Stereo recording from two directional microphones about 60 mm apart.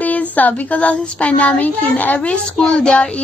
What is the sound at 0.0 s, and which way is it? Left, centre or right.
A child's voice, left.